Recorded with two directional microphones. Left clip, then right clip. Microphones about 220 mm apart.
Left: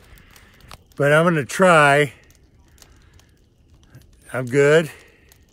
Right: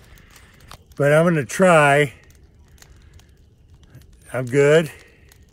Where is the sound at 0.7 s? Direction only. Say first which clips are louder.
Even; 15° left (ahead or behind).